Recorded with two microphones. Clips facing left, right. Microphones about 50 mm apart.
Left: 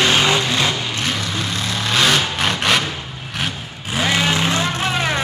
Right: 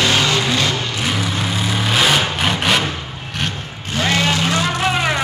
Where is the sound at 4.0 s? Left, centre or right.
Centre.